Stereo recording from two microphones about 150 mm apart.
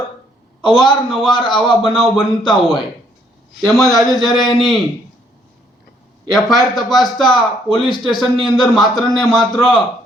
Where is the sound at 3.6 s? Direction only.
Centre (ahead or behind).